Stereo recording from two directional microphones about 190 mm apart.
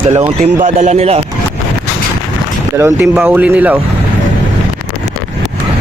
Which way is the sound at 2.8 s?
15° right (ahead or behind).